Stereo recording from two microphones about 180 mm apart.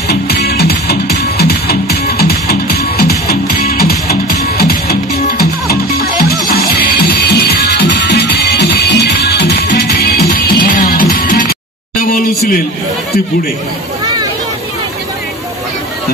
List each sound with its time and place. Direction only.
0.1 s music: 65° left (ahead or behind)
5.9 s music: 60° left (ahead or behind)